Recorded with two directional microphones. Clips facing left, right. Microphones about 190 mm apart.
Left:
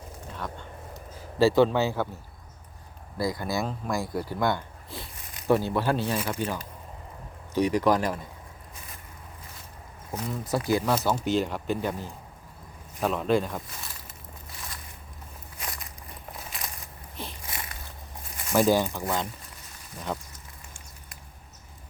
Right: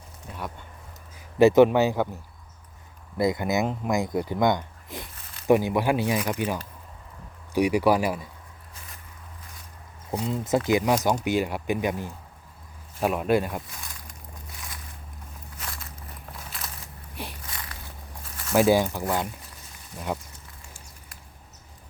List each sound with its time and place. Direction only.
1.4 s speech: 20° right (ahead or behind)
3.2 s speech: 20° right (ahead or behind)
10.1 s speech: 20° right (ahead or behind)
13.7 s a sound: centre (ahead or behind)
15.6 s walk: 15° left (ahead or behind)
17.2 s a sound: 10° right (ahead or behind)
18.5 s speech: 10° right (ahead or behind)
20.1 s speech: 10° right (ahead or behind)